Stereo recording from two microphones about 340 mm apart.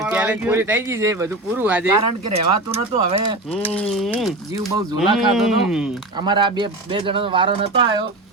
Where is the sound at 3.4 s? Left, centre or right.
Centre.